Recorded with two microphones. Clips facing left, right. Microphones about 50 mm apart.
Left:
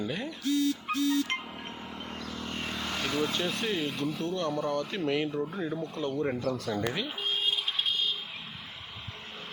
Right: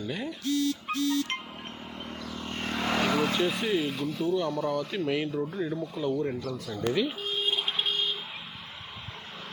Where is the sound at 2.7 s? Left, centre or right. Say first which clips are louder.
Right 5 dB; right.